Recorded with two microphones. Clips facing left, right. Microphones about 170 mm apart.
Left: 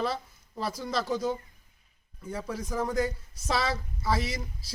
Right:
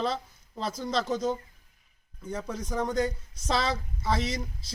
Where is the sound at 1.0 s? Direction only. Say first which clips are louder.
Right 1 dB; 5° left (ahead or behind).